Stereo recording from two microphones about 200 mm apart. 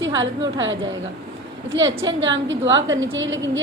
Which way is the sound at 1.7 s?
70° right (ahead or behind).